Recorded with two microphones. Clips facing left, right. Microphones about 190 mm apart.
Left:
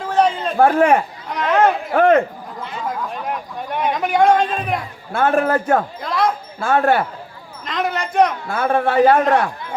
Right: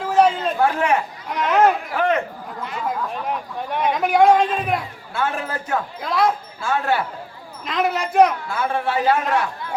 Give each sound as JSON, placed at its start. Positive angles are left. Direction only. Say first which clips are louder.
{"t": 0.0, "sound": "a sound", "louder": "right 1 dB", "side_deg": 0}
{"t": 0.5, "sound": "a man's voice", "louder": "left 6 dB", "side_deg": 50}
{"t": 1.3, "sound": "speech", "louder": "left 1 dB", "side_deg": 0}
{"t": 1.9, "sound": "a man's voice", "louder": "left 7 dB", "side_deg": 50}
{"t": 2.8, "sound": "speech", "louder": "even", "side_deg": 0}
{"t": 5.1, "sound": "a man's voice", "louder": "left 8 dB", "side_deg": 50}
{"t": 6.0, "sound": "speech", "louder": "even", "side_deg": 0}
{"t": 6.6, "sound": "a man's voice", "louder": "left 7 dB", "side_deg": 55}
{"t": 7.6, "sound": "speech", "louder": "right 1 dB", "side_deg": 0}
{"t": 8.4, "sound": "a man's voice", "louder": "left 5 dB", "side_deg": 55}